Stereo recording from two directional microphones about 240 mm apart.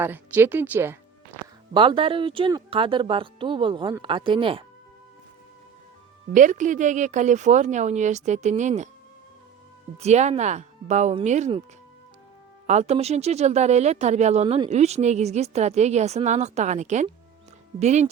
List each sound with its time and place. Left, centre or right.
0.0 s speech: centre
1.7 s speech: right
6.3 s speech: right
10.0 s speech: right
12.6 s speech: right